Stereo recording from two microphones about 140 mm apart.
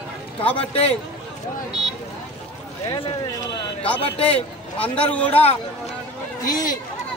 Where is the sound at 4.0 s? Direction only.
45° left (ahead or behind).